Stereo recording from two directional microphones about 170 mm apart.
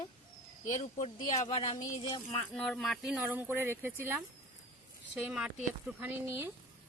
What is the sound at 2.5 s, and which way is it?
Speech, 5° left (ahead or behind).